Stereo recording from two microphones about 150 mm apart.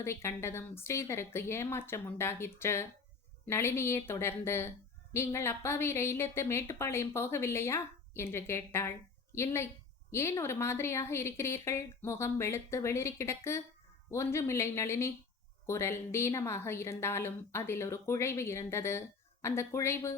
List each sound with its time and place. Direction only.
0.0 s a woman's voice: 15° left (ahead or behind)